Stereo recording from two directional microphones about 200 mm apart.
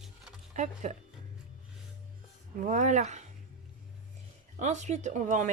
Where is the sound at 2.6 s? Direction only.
40° right (ahead or behind).